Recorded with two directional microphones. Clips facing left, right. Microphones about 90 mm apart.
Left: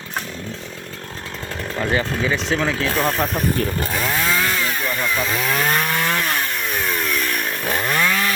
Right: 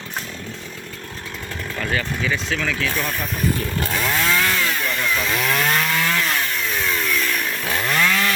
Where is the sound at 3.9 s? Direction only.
15° left (ahead or behind).